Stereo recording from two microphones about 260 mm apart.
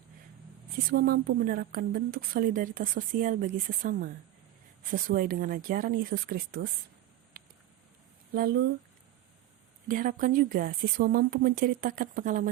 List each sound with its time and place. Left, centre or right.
0.9 s a woman's voice: right
7.3 s a sound: right
8.3 s a woman's voice: right
9.9 s a woman's voice: right